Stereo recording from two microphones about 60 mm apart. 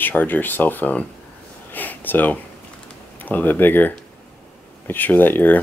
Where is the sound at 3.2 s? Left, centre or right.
Left.